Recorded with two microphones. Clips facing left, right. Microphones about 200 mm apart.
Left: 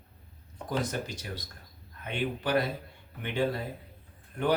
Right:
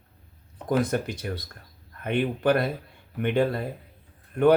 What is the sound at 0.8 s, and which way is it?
Speech, 55° right (ahead or behind).